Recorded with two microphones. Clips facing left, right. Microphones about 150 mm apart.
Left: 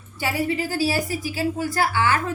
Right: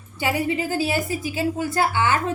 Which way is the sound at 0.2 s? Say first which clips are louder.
Right 1 dB; 20° right (ahead or behind).